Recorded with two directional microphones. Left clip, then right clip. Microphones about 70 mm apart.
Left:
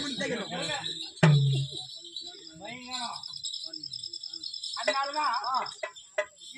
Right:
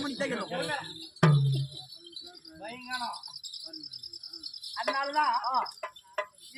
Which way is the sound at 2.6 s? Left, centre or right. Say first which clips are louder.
Right 1 dB; right.